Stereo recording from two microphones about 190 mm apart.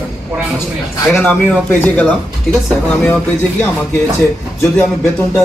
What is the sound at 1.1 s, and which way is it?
A man's voice, 10° left (ahead or behind).